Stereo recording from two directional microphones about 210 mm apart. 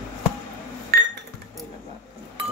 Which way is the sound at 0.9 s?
45° right (ahead or behind).